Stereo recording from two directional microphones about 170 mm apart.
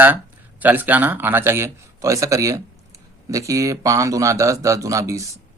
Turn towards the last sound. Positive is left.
turn(degrees=-20)  # may be behind; listen again after turning